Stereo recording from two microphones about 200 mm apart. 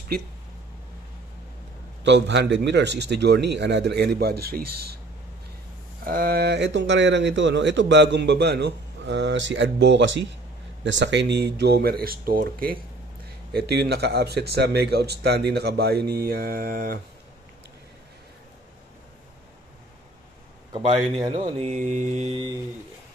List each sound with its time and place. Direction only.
2.0 s speech: 60° right (ahead or behind)
6.0 s speech: 50° right (ahead or behind)
20.7 s speech: 30° right (ahead or behind)
21.5 s mantra: 35° right (ahead or behind)